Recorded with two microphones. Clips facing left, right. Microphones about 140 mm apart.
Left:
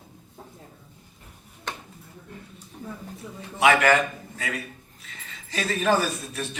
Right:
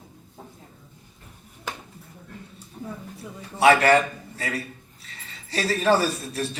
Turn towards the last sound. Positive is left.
turn(degrees=-35)  # may be behind; listen again after turning